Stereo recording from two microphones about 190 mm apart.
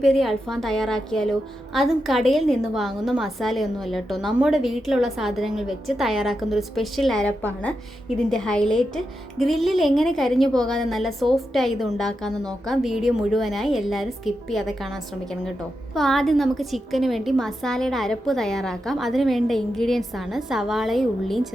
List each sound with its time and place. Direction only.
0.0 s a woman's voice: centre (ahead or behind)
16.0 s a woman's voice: centre (ahead or behind)